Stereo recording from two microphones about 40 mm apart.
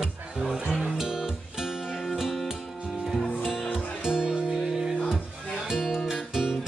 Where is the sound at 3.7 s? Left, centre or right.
Centre.